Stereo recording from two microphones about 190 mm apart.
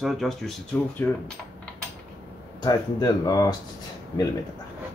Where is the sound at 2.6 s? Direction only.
20° left (ahead or behind).